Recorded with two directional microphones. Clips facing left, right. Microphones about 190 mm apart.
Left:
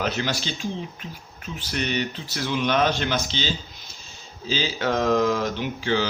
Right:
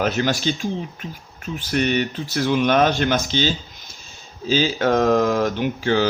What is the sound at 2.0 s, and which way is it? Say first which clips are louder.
Speech: right 6 dB; 50° right (ahead or behind).